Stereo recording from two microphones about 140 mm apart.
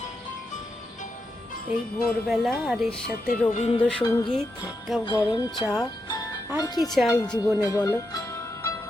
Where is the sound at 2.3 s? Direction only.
Centre (ahead or behind).